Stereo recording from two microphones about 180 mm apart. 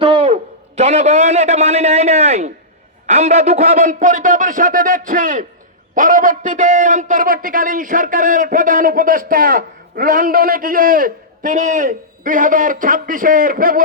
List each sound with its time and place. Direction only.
0.0 s a sound: 30° right (ahead or behind)
0.8 s a man's voice: 35° right (ahead or behind)
3.8 s a man's voice: 50° right (ahead or behind)